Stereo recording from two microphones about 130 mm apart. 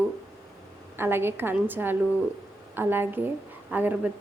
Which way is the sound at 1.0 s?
15° right (ahead or behind).